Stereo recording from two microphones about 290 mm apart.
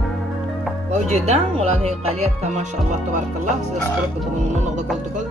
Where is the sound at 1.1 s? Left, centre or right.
Right.